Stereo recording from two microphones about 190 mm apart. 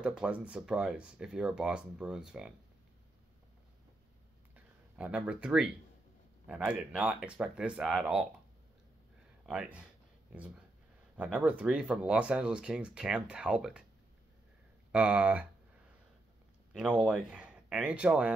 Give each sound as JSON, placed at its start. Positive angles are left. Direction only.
{"t": 0.0, "sound": "speech", "side_deg": -5}
{"t": 4.6, "sound": "speech", "side_deg": -5}
{"t": 9.5, "sound": "speech", "side_deg": -5}
{"t": 11.1, "sound": "speech", "side_deg": -5}
{"t": 14.9, "sound": "speech", "side_deg": -5}
{"t": 16.7, "sound": "speech", "side_deg": -5}